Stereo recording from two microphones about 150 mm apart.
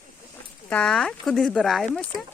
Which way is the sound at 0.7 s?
5° left (ahead or behind).